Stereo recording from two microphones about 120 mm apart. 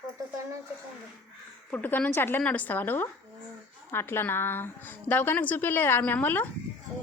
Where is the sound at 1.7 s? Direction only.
15° left (ahead or behind).